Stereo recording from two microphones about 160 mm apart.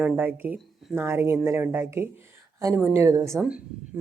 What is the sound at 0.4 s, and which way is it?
A woman's voice, 10° right (ahead or behind).